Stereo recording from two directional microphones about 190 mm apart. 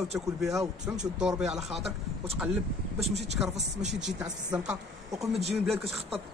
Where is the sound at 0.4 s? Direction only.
Centre (ahead or behind).